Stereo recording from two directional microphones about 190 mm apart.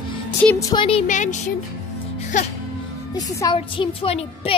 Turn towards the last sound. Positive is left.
turn(degrees=30)  # may be behind; listen again after turning